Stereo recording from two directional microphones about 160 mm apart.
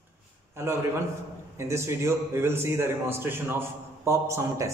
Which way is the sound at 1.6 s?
15° right (ahead or behind).